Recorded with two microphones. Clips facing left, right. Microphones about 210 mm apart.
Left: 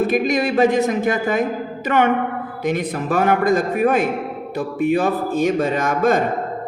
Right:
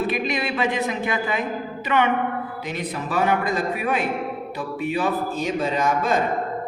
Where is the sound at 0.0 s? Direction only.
45° left (ahead or behind).